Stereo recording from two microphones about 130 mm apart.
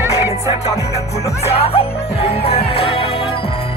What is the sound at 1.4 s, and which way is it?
Music, 50° left (ahead or behind).